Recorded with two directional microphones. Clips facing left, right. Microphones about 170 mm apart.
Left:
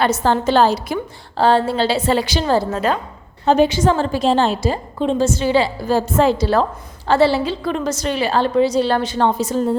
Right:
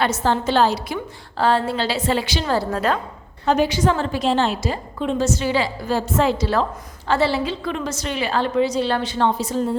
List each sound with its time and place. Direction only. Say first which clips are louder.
0.0 s a woman's voice: left 3 dB; 45° left (ahead or behind)
1.4 s a woman's voice: left 4 dB; 30° left (ahead or behind)
2.6 s a woman's voice: left 2 dB; 5° left (ahead or behind)
3.4 s a woman's voice: left 4 dB; 25° left (ahead or behind); by 9.6 s 45° left (ahead or behind)